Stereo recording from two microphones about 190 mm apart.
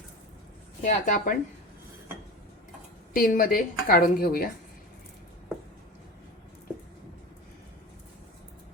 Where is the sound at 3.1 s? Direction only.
50° left (ahead or behind).